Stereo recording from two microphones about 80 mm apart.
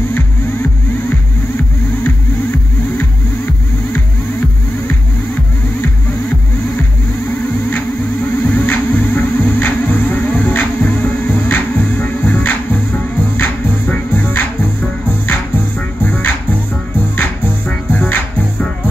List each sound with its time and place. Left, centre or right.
8.5 s music: left
16.0 s music: left